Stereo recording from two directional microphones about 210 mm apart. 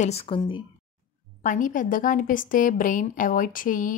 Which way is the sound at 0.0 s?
30° left (ahead or behind).